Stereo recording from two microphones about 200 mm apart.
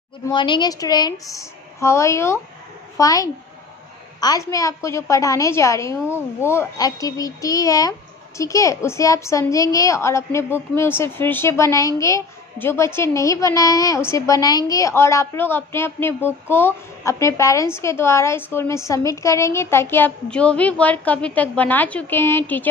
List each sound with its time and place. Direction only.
0.3 s a woman's voice: 25° left (ahead or behind)